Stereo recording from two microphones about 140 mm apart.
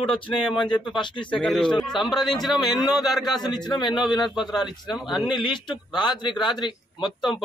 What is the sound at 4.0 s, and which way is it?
Speech, 35° left (ahead or behind).